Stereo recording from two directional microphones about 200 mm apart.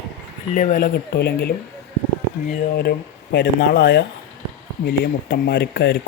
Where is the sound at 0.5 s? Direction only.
40° left (ahead or behind).